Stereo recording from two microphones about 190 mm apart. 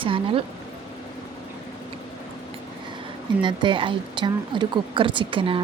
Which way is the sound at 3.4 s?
25° right (ahead or behind).